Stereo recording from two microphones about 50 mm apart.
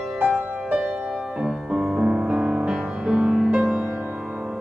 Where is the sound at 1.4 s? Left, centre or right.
Centre.